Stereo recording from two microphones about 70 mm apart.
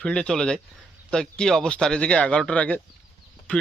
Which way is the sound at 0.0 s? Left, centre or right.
Centre.